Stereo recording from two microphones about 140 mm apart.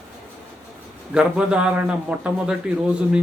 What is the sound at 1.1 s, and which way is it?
A man's voice, 5° right (ahead or behind).